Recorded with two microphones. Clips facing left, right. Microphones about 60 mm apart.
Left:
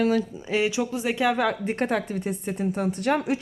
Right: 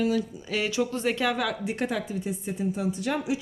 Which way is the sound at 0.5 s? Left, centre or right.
Centre.